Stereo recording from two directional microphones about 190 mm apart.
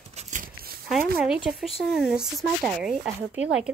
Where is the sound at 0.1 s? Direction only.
40° right (ahead or behind).